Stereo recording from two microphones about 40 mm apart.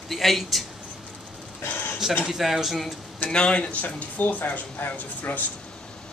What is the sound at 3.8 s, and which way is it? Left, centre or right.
Speech, left.